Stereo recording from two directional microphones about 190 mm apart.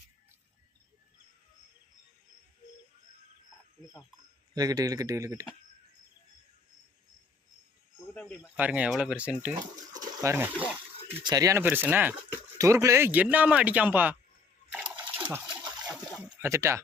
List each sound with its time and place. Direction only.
4.5 s speech: 20° right (ahead or behind)
8.1 s cricket: 5° left (ahead or behind)
8.5 s speech: 10° right (ahead or behind)
9.6 s speech: 20° right (ahead or behind)
11.2 s speech: 20° right (ahead or behind)
14.7 s water: 10° right (ahead or behind)
15.9 s a sound: centre (ahead or behind)
16.4 s speech: 15° right (ahead or behind)